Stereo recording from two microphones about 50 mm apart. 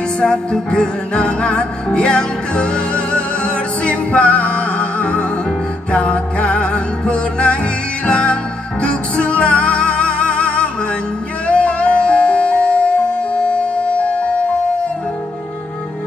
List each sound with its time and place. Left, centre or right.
0.2 s music: centre